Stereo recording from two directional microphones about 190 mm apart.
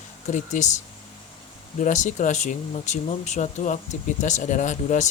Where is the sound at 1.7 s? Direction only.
40° left (ahead or behind).